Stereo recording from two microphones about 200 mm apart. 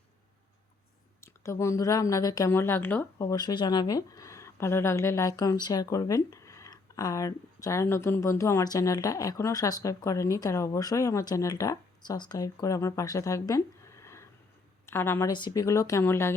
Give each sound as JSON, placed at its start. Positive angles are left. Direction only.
{"t": 1.2, "sound": "speech", "side_deg": 15}